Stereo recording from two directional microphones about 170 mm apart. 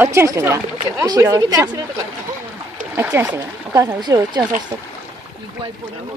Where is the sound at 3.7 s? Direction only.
20° right (ahead or behind).